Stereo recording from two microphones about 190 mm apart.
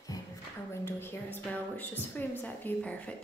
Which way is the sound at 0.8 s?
10° left (ahead or behind).